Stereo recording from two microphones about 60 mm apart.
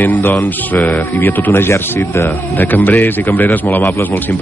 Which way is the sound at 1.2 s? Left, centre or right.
Left.